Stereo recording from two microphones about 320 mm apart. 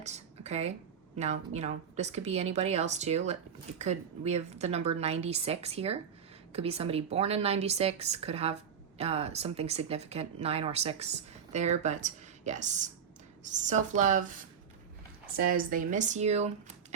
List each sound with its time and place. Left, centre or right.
0.0 s a sound: right
1.1 s a woman's voice: right
15.4 s a woman's voice: right